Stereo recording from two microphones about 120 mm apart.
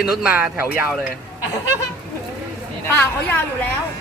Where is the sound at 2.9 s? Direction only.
15° left (ahead or behind).